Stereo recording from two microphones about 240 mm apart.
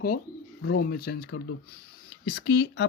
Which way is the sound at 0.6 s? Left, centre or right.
Left.